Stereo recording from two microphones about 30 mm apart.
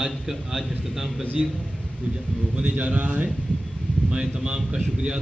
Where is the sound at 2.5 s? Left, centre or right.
Right.